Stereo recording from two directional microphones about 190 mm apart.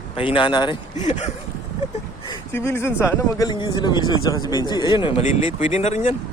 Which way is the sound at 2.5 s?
15° left (ahead or behind).